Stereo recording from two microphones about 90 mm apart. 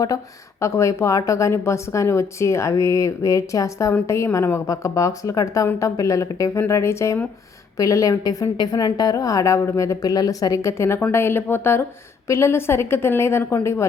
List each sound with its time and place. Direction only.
0.6 s a woman's voice: 35° left (ahead or behind)